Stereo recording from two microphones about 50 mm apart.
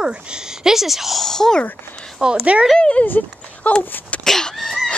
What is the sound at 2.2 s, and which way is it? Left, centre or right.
Speech, centre.